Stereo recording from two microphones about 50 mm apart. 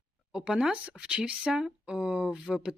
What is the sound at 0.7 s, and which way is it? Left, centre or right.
Speech, right.